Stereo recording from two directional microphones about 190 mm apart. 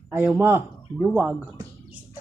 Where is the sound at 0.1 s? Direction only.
10° right (ahead or behind).